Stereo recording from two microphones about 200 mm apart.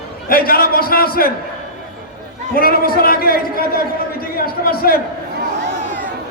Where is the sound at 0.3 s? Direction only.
45° left (ahead or behind).